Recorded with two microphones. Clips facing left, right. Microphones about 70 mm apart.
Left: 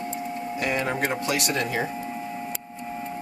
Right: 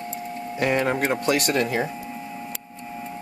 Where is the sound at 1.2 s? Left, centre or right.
Right.